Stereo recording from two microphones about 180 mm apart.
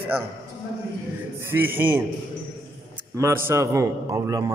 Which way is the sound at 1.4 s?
10° right (ahead or behind).